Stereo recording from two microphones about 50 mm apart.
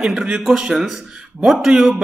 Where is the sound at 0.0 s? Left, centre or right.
Centre.